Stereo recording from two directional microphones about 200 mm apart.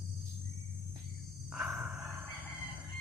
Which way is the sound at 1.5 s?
Centre (ahead or behind).